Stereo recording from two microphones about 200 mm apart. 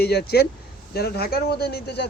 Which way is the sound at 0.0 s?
55° left (ahead or behind).